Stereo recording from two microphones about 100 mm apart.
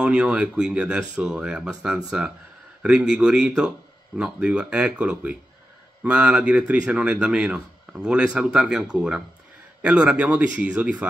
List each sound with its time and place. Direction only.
0.0 s speech: 10° right (ahead or behind)